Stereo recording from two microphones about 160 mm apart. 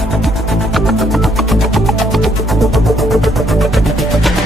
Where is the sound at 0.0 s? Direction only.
Centre (ahead or behind).